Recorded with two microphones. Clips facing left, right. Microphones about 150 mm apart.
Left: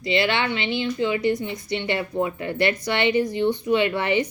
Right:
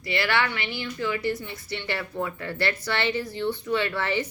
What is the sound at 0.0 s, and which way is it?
A woman's voice, 20° left (ahead or behind).